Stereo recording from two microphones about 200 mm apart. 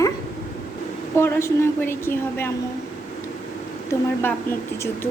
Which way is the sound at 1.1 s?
10° left (ahead or behind).